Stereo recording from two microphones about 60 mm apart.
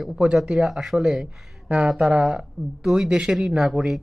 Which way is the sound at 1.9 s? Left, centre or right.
Centre.